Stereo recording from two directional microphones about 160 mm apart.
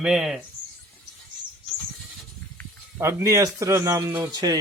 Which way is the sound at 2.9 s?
20° right (ahead or behind).